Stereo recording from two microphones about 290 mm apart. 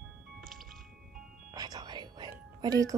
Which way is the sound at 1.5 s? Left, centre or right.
Centre.